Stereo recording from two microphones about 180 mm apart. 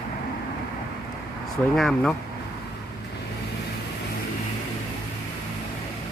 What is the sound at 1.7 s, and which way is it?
Speech, centre (ahead or behind).